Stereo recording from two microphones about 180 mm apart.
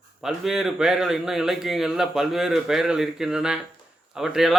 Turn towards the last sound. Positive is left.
turn(degrees=0)  # may be behind; listen again after turning